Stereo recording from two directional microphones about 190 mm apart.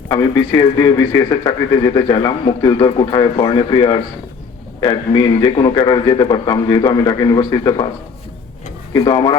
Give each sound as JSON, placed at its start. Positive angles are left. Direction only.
{"t": 0.1, "sound": "a man's voice", "side_deg": 20}
{"t": 8.9, "sound": "a man's voice", "side_deg": 20}